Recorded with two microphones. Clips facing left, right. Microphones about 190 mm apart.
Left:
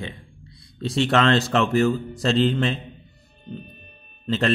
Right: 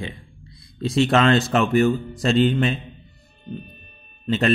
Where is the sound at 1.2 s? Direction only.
15° right (ahead or behind).